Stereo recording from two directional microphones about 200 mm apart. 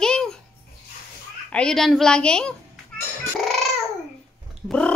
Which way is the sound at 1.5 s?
5° left (ahead or behind).